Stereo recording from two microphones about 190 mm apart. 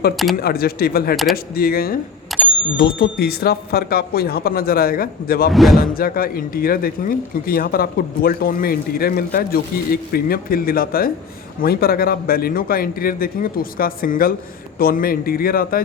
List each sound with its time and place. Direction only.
0.3 s speech: 55° left (ahead or behind)
1.1 s speech: centre (ahead or behind)
1.5 s speech: 50° left (ahead or behind)
2.3 s a sound: centre (ahead or behind)
2.7 s speech: 55° left (ahead or behind)
5.5 s speech: centre (ahead or behind)
5.7 s speech: 50° left (ahead or behind)